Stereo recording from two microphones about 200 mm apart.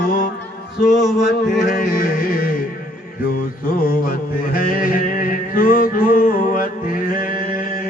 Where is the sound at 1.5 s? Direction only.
45° left (ahead or behind).